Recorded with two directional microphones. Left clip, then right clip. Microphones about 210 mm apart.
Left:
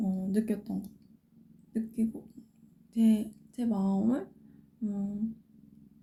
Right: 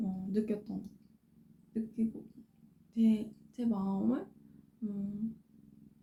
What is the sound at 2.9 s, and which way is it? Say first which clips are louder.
A woman's voice: left 4 dB; 30° left (ahead or behind).